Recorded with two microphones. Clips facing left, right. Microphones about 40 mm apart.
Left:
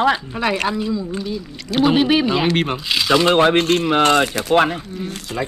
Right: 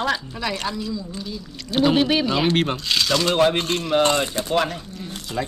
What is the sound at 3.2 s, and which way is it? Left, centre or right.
Speech, left.